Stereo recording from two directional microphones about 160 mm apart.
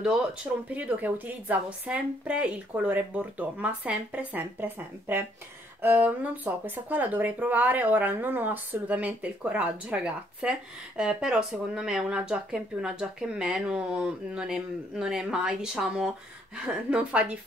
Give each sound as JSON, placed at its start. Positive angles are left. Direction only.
{"t": 0.0, "sound": "speech", "side_deg": -5}